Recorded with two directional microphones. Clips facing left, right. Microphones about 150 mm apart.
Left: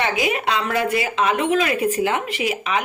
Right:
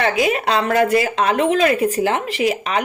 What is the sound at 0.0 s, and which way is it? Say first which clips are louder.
Speech: right 3 dB; 40° right (ahead or behind).